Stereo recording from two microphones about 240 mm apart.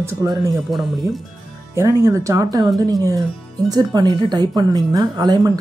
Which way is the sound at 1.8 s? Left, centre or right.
Centre.